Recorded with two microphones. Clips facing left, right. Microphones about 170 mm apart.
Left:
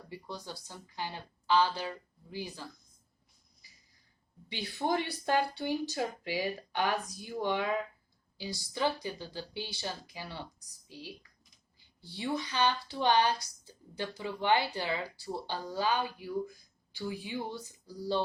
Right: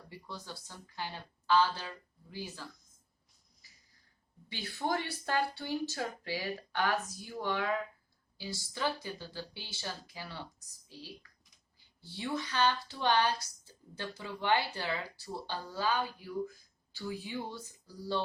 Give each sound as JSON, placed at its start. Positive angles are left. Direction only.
{"t": 0.1, "sound": "speech", "side_deg": 15}
{"t": 4.4, "sound": "speech", "side_deg": 15}